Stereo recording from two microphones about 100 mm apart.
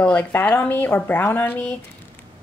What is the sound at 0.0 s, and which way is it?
A woman's voice, 15° left (ahead or behind).